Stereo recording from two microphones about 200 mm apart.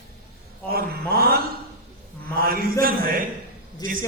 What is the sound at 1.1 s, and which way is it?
A man's voice, 50° right (ahead or behind).